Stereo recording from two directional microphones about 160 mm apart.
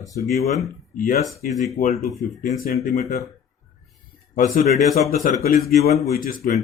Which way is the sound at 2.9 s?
45° left (ahead or behind).